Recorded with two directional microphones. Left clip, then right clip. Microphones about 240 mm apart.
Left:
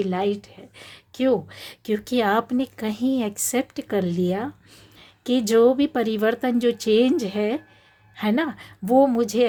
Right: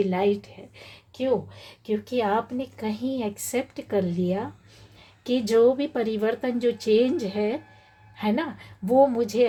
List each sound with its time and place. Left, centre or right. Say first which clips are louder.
0.0 s speech: right 1 dB; centre
1.2 s speech: left 3 dB; left